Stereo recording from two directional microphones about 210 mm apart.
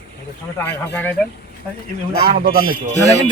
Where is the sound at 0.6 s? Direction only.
10° left (ahead or behind).